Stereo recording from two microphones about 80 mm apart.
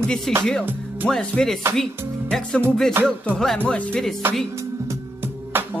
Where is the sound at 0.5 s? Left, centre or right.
Centre.